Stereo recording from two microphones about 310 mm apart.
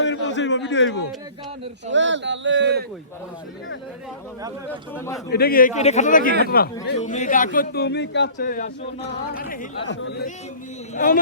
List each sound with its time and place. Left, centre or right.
0.0 s a man's voice: left
1.9 s speech: right
4.9 s a man's voice: centre
5.3 s a man's voice: left